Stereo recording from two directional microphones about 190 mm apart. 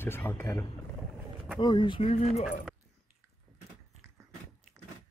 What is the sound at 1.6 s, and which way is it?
Speech, 25° left (ahead or behind).